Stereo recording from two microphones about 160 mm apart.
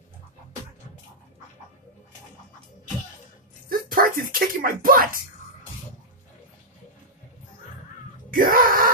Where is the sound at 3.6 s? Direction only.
60° right (ahead or behind).